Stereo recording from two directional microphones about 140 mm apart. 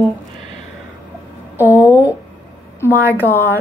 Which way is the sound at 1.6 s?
15° right (ahead or behind).